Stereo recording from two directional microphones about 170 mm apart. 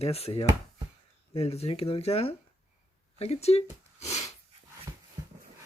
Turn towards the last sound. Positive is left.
turn(degrees=40)  # may be behind; listen again after turning